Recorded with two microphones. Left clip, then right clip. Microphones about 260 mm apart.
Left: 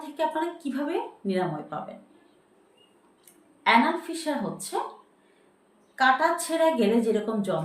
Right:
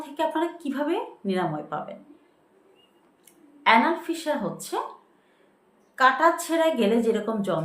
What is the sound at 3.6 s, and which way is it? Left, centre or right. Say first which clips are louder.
A woman's voice: right 2 dB; centre.